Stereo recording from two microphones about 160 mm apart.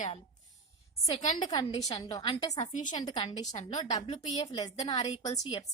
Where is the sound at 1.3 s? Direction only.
25° left (ahead or behind).